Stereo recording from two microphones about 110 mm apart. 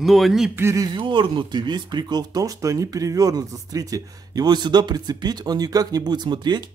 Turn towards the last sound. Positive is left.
turn(degrees=-40)  # may be behind; listen again after turning